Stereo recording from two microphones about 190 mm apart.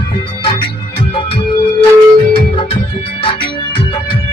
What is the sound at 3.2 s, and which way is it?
Music, 25° left (ahead or behind).